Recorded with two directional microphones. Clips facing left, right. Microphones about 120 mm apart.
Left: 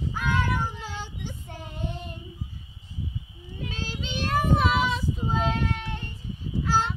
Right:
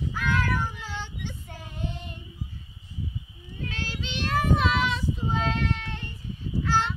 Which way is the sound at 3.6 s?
15° left (ahead or behind).